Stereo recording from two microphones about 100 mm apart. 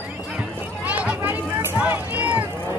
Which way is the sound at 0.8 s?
15° right (ahead or behind).